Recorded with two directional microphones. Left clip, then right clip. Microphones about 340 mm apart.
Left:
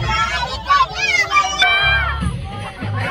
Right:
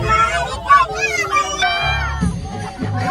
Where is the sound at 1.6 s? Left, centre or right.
Right.